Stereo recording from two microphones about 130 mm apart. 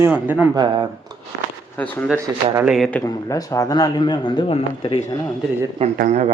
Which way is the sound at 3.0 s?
25° left (ahead or behind).